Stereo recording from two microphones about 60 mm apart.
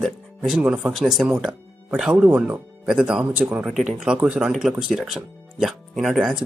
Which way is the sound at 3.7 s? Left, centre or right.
Centre.